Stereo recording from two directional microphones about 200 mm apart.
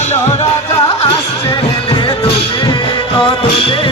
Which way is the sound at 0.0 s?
30° left (ahead or behind).